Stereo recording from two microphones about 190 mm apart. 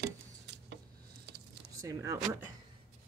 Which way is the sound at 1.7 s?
15° right (ahead or behind).